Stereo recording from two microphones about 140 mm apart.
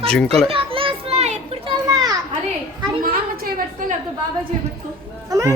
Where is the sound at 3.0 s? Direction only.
90° right.